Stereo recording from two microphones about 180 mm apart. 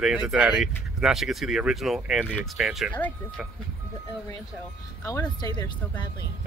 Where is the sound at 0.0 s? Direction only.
5° right (ahead or behind).